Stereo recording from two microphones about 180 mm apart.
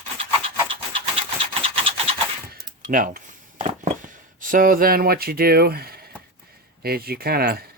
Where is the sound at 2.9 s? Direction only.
50° right (ahead or behind).